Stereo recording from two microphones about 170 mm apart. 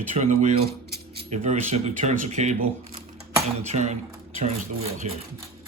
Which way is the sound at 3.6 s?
40° right (ahead or behind).